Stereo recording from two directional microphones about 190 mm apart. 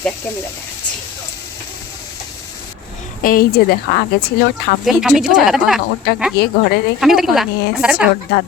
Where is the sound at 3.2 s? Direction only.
50° left (ahead or behind).